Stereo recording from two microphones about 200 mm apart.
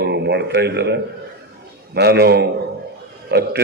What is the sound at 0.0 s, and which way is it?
A man's voice, 55° right (ahead or behind).